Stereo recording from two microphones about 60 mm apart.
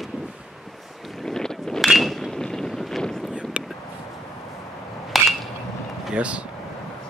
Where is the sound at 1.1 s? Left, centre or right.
Centre.